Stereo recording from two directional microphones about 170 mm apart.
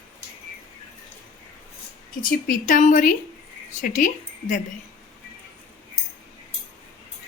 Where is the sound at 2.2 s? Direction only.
55° left (ahead or behind).